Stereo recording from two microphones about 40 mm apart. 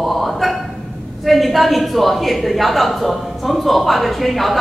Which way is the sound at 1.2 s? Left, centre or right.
Centre.